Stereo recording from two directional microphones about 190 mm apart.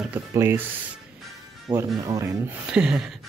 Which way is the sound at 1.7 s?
15° right (ahead or behind).